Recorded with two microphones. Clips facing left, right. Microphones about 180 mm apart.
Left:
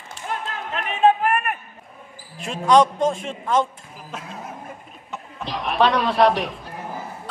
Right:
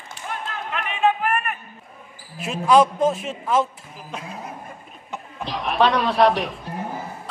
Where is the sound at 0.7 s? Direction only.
45° left (ahead or behind).